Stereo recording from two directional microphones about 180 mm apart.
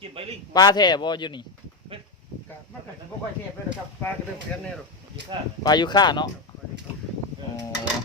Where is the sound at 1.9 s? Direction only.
30° right (ahead or behind).